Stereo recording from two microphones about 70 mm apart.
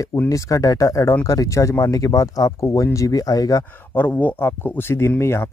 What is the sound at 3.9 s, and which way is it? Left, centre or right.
Speech, left.